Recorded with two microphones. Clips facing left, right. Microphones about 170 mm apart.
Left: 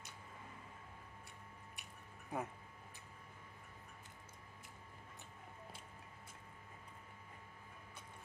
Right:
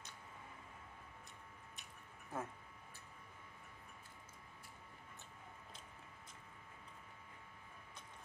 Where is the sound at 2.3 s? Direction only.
15° left (ahead or behind).